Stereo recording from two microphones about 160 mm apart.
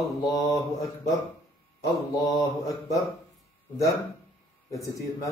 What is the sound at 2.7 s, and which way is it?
Speech, 20° left (ahead or behind).